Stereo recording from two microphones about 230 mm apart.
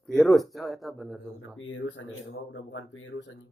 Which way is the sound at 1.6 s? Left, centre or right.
Left.